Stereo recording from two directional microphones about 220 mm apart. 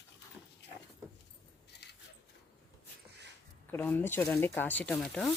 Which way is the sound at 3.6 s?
10° left (ahead or behind).